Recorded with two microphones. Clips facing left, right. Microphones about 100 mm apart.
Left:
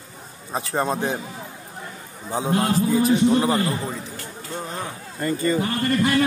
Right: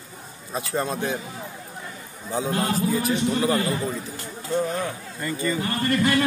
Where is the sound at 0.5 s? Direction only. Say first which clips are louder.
Left 3 dB; 35° left (ahead or behind).